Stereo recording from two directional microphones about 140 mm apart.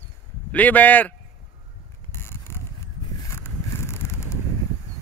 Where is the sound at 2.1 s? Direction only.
15° left (ahead or behind).